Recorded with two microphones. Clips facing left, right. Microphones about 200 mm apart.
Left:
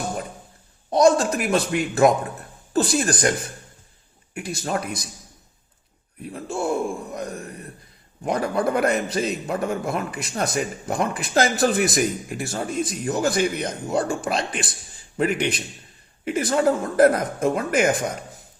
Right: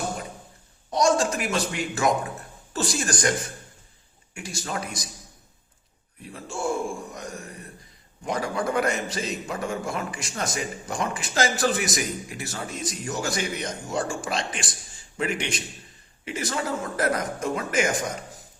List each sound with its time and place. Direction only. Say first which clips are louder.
0.9 s a man's voice: left 5 dB; 55° left (ahead or behind)
6.3 s a man's voice: left 4 dB; 60° left (ahead or behind)